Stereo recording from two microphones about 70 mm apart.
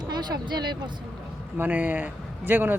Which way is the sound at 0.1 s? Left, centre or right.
Right.